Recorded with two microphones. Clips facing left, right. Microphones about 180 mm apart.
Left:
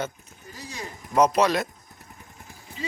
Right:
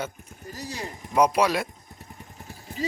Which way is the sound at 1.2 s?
10° right (ahead or behind).